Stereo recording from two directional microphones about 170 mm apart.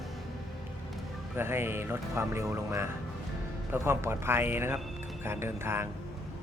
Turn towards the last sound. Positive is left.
turn(degrees=-15)  # may be behind; listen again after turning